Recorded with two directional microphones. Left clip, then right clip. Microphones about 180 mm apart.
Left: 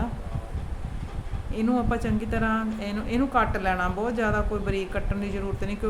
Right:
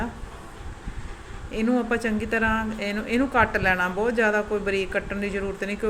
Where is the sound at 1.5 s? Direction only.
5° left (ahead or behind).